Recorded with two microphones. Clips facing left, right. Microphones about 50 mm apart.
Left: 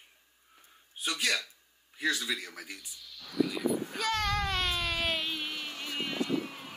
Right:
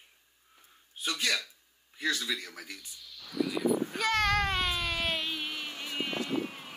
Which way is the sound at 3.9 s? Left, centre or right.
Right.